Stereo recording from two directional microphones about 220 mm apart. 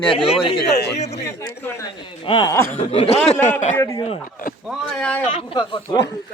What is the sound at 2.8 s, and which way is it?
Speech, 30° left (ahead or behind).